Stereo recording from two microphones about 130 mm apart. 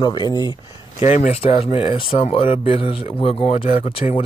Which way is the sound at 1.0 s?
65° left (ahead or behind).